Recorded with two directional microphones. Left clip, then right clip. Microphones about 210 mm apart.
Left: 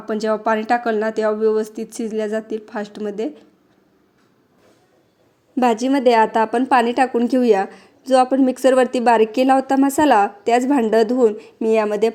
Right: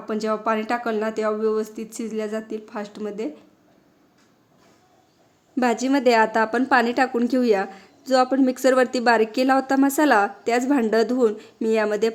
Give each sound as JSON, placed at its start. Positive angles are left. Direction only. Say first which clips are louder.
{"t": 0.0, "sound": "a woman's voice", "louder": "left 4 dB", "side_deg": 20}
{"t": 5.5, "sound": "a woman's voice", "louder": "left 4 dB", "side_deg": 10}